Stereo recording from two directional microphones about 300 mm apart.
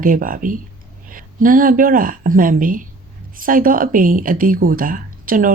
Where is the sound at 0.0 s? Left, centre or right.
Right.